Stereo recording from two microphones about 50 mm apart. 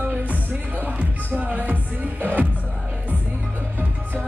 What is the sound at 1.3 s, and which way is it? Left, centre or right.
Music, right.